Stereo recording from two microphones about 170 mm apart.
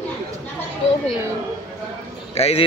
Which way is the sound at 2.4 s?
35° left (ahead or behind).